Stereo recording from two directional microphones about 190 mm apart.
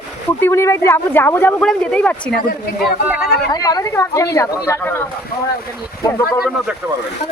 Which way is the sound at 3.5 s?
20° left (ahead or behind).